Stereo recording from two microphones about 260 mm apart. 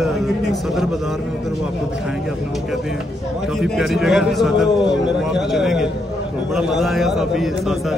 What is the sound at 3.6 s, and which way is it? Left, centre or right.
A man's voice, centre.